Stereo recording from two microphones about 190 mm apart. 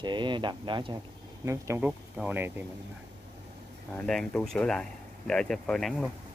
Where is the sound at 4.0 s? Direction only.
5° left (ahead or behind).